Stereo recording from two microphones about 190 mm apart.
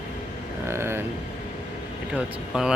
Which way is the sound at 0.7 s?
15° right (ahead or behind).